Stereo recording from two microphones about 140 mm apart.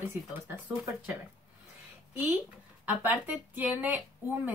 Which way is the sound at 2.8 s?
15° right (ahead or behind).